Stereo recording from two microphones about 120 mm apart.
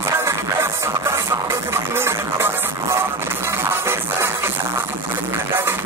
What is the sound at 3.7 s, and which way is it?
Music, 20° right (ahead or behind).